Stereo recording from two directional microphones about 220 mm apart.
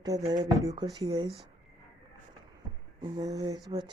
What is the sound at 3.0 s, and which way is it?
Speech, 20° right (ahead or behind).